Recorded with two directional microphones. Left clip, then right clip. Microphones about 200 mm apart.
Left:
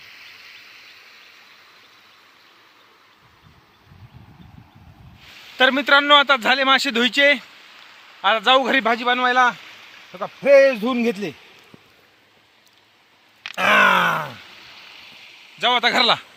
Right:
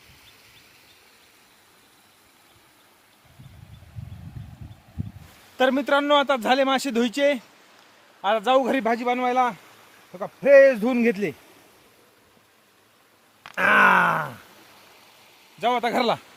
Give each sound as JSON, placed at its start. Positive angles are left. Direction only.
{"t": 5.5, "sound": "speech", "side_deg": 5}
{"t": 10.1, "sound": "speech", "side_deg": 20}
{"t": 10.4, "sound": "speech", "side_deg": 5}
{"t": 13.6, "sound": "grunt", "side_deg": -5}
{"t": 15.6, "sound": "speech", "side_deg": -5}